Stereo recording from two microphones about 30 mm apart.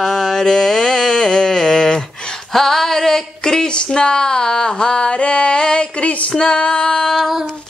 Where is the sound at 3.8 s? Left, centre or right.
Left.